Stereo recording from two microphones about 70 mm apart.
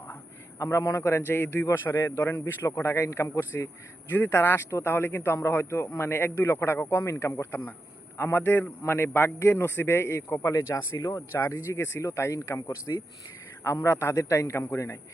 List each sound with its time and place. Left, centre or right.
0.6 s speech: left
1.2 s a man's voice: left
4.1 s a man's voice: left
10.9 s speech: left
11.4 s speech: left
13.7 s a man's voice: left